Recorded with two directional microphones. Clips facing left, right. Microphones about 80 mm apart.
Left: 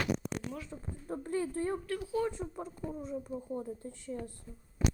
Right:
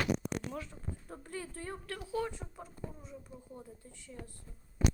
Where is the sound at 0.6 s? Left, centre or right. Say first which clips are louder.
Left 3 dB; left.